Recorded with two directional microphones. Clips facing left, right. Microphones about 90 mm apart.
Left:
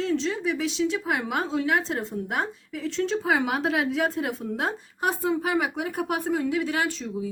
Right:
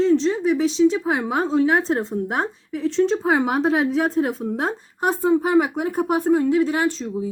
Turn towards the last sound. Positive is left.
turn(degrees=-30)  # may be behind; listen again after turning